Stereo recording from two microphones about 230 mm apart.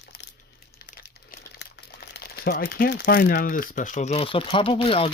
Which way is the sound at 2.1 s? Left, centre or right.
Left.